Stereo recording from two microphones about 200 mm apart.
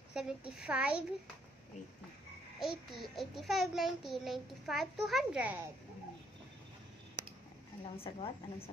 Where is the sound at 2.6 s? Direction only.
Centre (ahead or behind).